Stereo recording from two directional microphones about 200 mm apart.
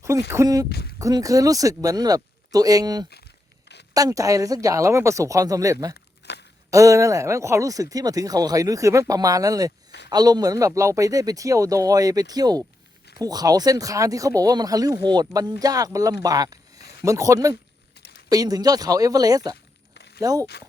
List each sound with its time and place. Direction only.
0.3 s speech: 15° right (ahead or behind)
0.7 s speech: 55° left (ahead or behind)
0.9 s speech: 15° right (ahead or behind)
5.9 s a sound: 55° left (ahead or behind)
6.7 s speech: 15° right (ahead or behind)
19.9 s a sound: 60° left (ahead or behind)
20.2 s speech: 15° right (ahead or behind)